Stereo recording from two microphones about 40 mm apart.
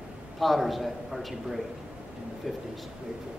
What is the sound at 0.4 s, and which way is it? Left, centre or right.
A man's voice, centre.